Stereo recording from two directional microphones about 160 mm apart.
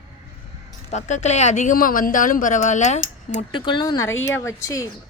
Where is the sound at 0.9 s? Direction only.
45° left (ahead or behind).